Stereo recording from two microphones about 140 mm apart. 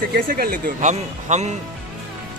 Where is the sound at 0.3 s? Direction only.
90° right; by 1.6 s 55° right (ahead or behind).